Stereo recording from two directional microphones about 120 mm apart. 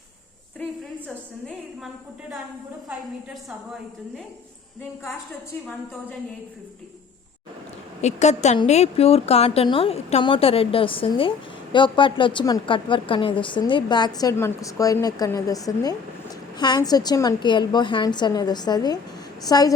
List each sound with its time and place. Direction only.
8.0 s a woman's voice: 70° left (ahead or behind); by 19.7 s 30° left (ahead or behind)